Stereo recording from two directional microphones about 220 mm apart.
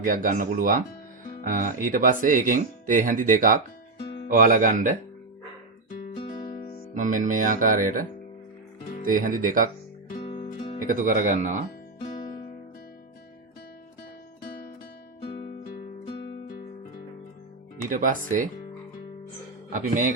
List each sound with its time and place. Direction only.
0.0 s speech: 40° right (ahead or behind)
6.9 s speech: 35° right (ahead or behind)
9.0 s speech: 40° right (ahead or behind)
10.2 s music: 25° left (ahead or behind)
10.8 s speech: 35° right (ahead or behind)
14.4 s music: 45° left (ahead or behind)
15.8 s music: 30° left (ahead or behind)
17.8 s speech: 35° right (ahead or behind)
19.7 s speech: 35° right (ahead or behind)